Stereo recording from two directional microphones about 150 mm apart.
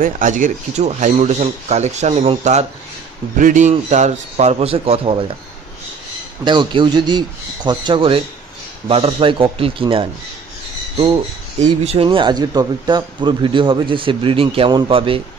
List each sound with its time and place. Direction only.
0.0 s speech: 60° right (ahead or behind)
3.3 s speech: 60° right (ahead or behind); by 5.2 s 40° right (ahead or behind)
6.4 s speech: 30° right (ahead or behind)
11.6 s speech: 45° right (ahead or behind)